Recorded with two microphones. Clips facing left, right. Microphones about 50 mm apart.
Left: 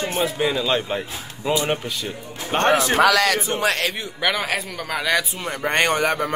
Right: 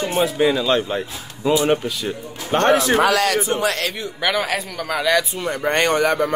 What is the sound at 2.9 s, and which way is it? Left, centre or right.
Speech, left.